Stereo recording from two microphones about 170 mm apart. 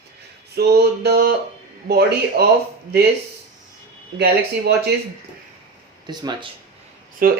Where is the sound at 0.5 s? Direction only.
70° right (ahead or behind).